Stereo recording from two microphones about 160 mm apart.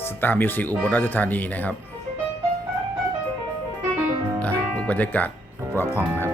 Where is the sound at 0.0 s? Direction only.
15° left (ahead or behind).